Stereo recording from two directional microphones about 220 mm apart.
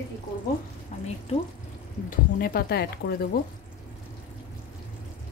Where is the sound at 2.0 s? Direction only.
40° left (ahead or behind).